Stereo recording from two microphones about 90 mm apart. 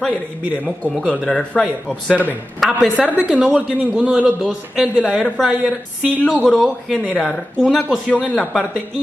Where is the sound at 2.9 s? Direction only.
15° right (ahead or behind).